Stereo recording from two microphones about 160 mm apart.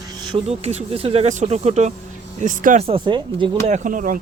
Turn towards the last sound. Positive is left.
turn(degrees=-55)  # may be behind; listen again after turning